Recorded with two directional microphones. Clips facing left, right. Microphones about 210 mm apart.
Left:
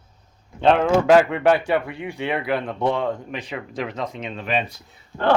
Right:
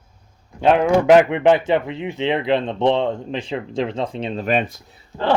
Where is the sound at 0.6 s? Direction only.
5° right (ahead or behind).